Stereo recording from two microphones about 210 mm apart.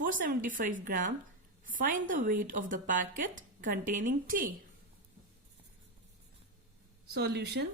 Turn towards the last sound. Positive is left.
turn(degrees=-50)  # may be behind; listen again after turning